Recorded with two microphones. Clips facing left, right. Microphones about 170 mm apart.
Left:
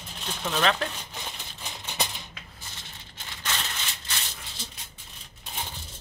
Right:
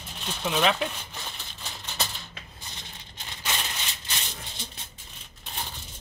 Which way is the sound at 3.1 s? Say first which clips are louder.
Right 1 dB; 15° right (ahead or behind).